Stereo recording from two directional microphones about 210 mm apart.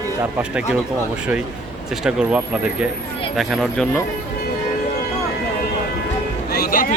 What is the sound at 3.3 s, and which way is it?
Speech, centre (ahead or behind).